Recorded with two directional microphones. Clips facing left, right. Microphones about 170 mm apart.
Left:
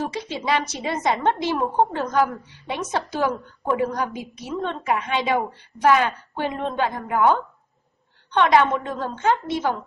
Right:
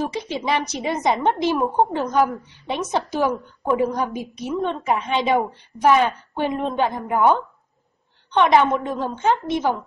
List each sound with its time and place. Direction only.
0.1 s a woman's voice: 15° right (ahead or behind)